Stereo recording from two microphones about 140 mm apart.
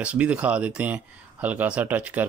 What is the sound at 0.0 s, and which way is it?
Speech, 10° right (ahead or behind).